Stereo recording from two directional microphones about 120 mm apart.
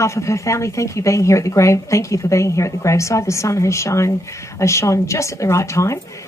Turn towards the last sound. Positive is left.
turn(degrees=25)  # may be behind; listen again after turning